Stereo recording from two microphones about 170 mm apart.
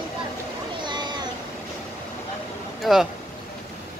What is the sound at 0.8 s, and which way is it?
Cat, 25° right (ahead or behind).